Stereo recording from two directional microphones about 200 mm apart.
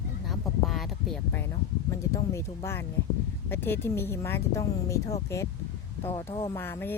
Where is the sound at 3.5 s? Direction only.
10° left (ahead or behind).